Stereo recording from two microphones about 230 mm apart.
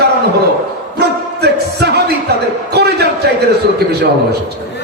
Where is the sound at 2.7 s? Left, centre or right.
Right.